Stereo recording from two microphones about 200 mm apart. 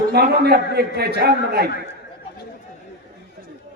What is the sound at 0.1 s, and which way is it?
A man's voice, 55° right (ahead or behind).